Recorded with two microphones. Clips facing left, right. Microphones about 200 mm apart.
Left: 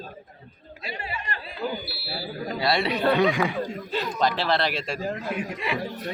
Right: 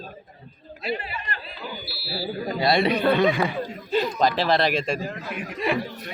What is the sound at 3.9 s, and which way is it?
A man's voice, 15° right (ahead or behind).